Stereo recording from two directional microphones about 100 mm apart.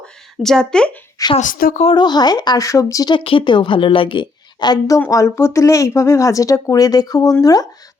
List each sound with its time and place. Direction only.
0.0 s a sound: 5° left (ahead or behind)
1.2 s speech: 35° left (ahead or behind)
3.1 s a woman's voice: 65° left (ahead or behind); by 4.9 s 45° left (ahead or behind)
5.1 s speech: 30° left (ahead or behind)